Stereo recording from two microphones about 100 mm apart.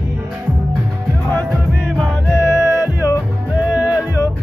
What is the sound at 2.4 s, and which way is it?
Music, 30° left (ahead or behind).